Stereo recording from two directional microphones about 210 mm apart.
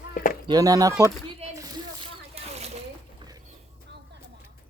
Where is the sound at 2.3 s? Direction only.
30° right (ahead or behind).